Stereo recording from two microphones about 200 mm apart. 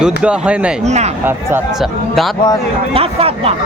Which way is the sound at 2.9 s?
30° right (ahead or behind).